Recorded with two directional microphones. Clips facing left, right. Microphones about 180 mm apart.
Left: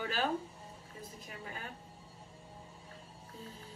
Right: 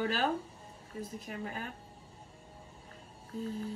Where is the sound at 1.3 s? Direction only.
45° right (ahead or behind).